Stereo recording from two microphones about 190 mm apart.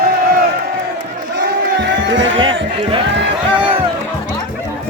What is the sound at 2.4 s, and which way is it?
Speech, 25° right (ahead or behind).